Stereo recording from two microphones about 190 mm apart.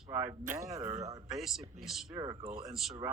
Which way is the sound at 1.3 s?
Centre (ahead or behind).